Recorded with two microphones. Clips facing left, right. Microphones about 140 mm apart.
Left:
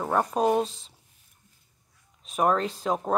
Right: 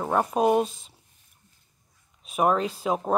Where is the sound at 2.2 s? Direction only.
10° right (ahead or behind).